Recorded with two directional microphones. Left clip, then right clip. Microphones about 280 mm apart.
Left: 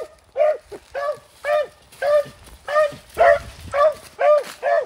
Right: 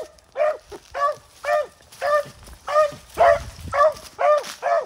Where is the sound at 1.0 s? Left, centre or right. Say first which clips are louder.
Right 2 dB; right.